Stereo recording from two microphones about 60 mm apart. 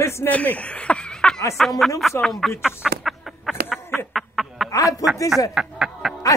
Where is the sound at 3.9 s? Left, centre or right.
Centre.